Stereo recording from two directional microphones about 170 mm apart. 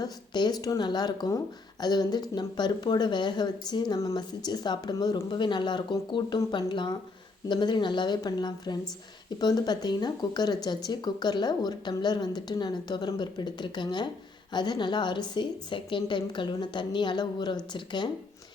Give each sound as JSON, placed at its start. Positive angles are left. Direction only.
{"t": 0.0, "sound": "speech", "side_deg": 25}